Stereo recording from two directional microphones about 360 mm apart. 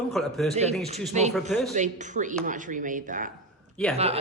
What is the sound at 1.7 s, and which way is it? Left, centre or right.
Speech, centre.